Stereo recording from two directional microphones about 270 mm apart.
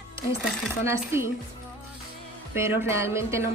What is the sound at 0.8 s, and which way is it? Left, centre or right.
Speech, centre.